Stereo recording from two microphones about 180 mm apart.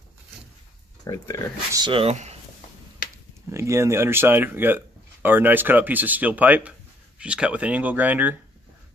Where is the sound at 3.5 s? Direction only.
15° right (ahead or behind).